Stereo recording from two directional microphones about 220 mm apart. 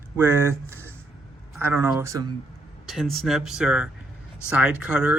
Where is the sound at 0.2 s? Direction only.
10° right (ahead or behind).